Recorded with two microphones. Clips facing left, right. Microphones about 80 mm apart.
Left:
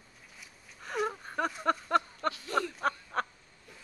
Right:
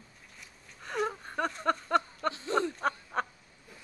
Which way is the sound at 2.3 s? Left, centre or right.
Right.